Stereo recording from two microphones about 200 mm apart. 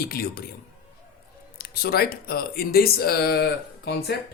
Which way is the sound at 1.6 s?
50° left (ahead or behind).